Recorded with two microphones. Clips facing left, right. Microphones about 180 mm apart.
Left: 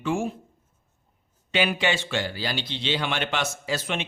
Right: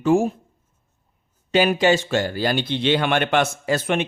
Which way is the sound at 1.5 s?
40° right (ahead or behind).